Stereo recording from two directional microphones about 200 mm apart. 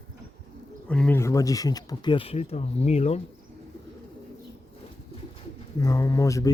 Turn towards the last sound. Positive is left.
turn(degrees=15)  # may be behind; listen again after turning